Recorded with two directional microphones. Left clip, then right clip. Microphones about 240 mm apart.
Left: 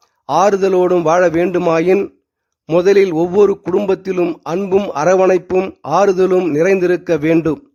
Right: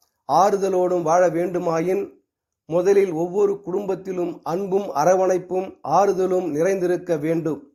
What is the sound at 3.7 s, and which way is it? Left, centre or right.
A man's voice, left.